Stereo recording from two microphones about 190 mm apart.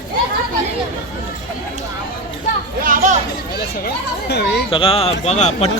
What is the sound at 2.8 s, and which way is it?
Chatter, 45° right (ahead or behind).